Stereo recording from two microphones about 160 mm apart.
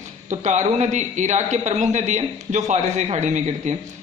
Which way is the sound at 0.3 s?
45° right (ahead or behind).